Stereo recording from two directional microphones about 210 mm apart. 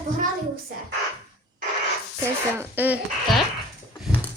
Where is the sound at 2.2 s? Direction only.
10° right (ahead or behind).